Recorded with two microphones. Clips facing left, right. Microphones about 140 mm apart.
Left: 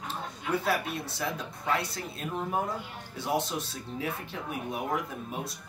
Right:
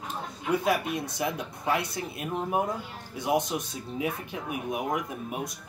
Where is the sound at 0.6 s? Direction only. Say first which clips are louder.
Right 3 dB; 15° right (ahead or behind).